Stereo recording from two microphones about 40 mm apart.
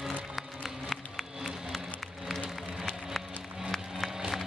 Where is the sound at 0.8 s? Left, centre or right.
Centre.